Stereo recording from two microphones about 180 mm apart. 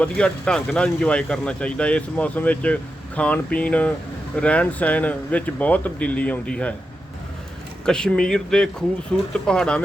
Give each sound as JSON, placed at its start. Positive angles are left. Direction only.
{"t": 0.0, "sound": "speech", "side_deg": 5}
{"t": 7.9, "sound": "speech", "side_deg": 5}